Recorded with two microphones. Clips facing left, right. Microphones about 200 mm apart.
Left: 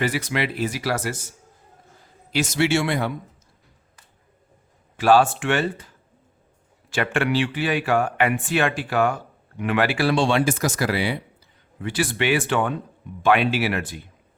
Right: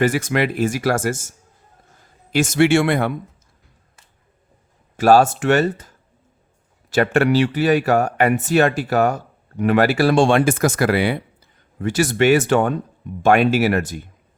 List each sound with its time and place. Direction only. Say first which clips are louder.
0.0 s speech: right 6 dB; 50° right (ahead or behind)
2.3 s speech: right 6 dB; 50° right (ahead or behind)
4.9 s speech: right 4 dB; 40° right (ahead or behind)
6.9 s speech: right 6 dB; 40° right (ahead or behind)
11.8 s speech: right 7 dB; 45° right (ahead or behind)